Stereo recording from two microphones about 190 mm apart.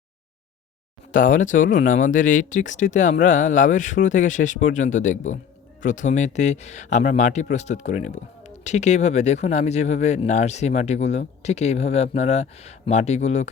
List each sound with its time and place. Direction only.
1.1 s speech: 45° left (ahead or behind)